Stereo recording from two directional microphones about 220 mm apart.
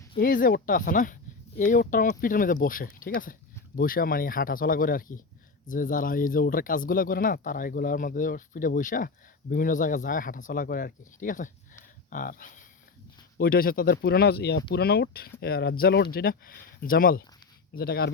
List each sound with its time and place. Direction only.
0.2 s speech: 40° left (ahead or behind)